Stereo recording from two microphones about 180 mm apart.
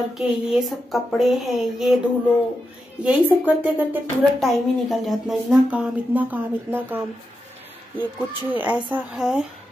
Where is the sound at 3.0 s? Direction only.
10° right (ahead or behind).